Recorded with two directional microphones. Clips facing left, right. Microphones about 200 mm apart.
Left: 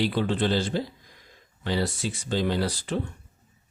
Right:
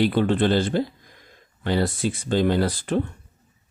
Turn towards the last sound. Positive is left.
turn(degrees=-55)  # may be behind; listen again after turning